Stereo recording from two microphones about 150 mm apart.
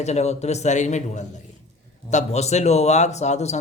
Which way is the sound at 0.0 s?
45° left (ahead or behind).